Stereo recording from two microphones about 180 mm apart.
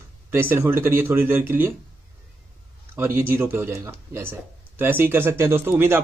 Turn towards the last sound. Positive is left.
turn(degrees=-15)  # may be behind; listen again after turning